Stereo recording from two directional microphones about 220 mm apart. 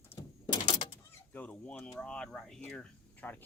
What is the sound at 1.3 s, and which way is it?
Speech, 5° left (ahead or behind).